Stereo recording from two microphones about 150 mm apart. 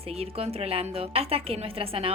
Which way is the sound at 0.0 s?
40° right (ahead or behind).